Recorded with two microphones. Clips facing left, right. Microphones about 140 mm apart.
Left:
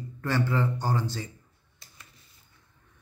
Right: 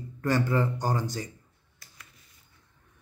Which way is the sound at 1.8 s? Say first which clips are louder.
Even; 25° left (ahead or behind).